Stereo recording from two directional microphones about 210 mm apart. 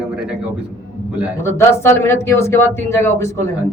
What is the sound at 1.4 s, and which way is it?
A man's voice, 10° left (ahead or behind).